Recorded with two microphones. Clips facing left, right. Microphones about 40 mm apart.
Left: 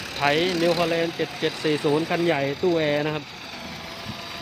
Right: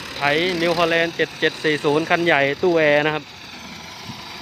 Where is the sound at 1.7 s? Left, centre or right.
Right.